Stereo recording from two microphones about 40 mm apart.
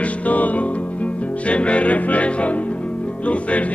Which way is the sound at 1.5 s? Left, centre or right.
Left.